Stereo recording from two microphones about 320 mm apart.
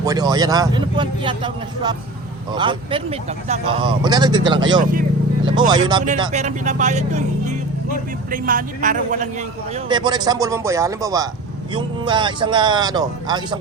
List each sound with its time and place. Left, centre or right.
0.0 s speech: centre
4.8 s speech: right
5.5 s speech: centre